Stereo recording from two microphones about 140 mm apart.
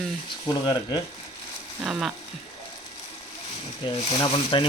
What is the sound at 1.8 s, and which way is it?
Speech, 5° right (ahead or behind).